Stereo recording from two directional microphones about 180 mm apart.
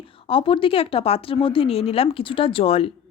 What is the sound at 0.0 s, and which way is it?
Speech, 30° left (ahead or behind).